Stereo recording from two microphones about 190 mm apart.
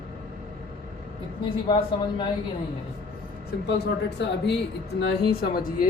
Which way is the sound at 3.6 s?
60° left (ahead or behind).